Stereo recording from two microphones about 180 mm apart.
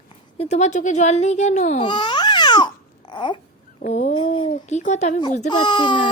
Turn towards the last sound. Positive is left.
turn(degrees=25)  # may be behind; listen again after turning